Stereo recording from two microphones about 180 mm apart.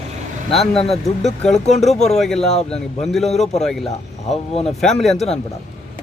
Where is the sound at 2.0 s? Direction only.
Centre (ahead or behind).